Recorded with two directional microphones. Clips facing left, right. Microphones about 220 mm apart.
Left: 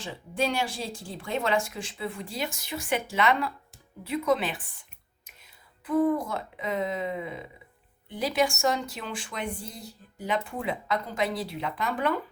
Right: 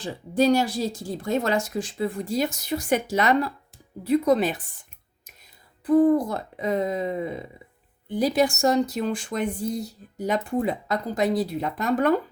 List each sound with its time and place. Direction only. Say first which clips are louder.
0.0 s speech: right 8 dB; 40° right (ahead or behind)
5.8 s speech: right 6 dB; 35° right (ahead or behind)